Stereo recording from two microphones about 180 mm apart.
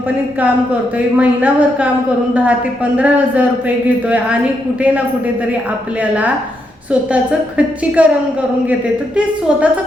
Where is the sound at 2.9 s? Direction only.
10° right (ahead or behind).